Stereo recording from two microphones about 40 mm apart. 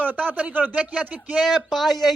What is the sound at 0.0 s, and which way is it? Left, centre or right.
Speech, right.